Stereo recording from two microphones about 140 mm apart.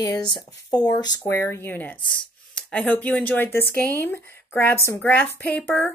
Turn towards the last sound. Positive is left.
turn(degrees=10)  # may be behind; listen again after turning